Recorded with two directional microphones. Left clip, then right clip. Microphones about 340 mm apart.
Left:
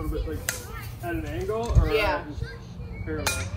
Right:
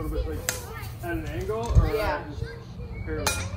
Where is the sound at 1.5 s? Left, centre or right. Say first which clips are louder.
Left 1 dB; centre.